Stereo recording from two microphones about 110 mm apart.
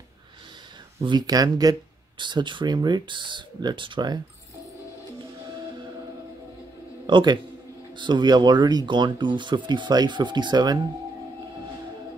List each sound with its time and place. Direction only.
1.0 s speech: 40° right (ahead or behind)
7.1 s a man's voice: 45° right (ahead or behind)